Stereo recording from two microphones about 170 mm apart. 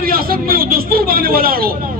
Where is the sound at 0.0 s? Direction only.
60° right (ahead or behind).